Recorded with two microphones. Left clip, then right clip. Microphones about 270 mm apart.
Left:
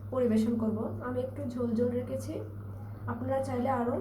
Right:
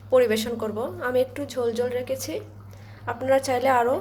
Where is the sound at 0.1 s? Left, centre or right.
Right.